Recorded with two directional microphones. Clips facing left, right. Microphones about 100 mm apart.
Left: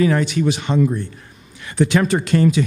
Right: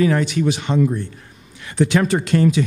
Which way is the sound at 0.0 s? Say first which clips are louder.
Even; 15° left (ahead or behind).